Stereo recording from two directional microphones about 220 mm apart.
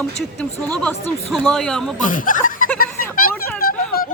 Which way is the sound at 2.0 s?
40° left (ahead or behind).